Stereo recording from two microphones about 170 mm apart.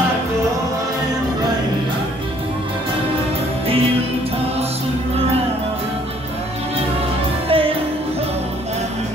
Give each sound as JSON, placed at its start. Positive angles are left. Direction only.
{"t": 7.4, "sound": "music", "side_deg": -35}